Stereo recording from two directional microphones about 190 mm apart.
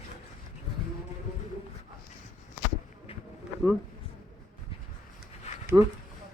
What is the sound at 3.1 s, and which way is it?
Bee, 30° left (ahead or behind).